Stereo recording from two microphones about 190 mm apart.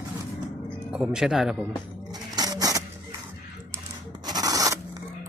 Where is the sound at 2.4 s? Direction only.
20° right (ahead or behind).